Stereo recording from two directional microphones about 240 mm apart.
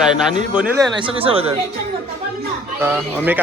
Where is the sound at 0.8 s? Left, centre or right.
Right.